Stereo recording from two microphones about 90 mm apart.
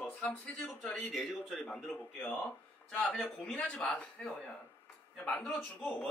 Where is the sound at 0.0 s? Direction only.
20° left (ahead or behind).